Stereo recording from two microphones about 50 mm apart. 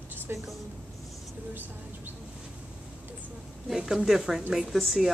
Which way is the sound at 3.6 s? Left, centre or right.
Centre.